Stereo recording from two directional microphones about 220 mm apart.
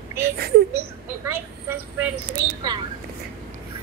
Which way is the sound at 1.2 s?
10° right (ahead or behind).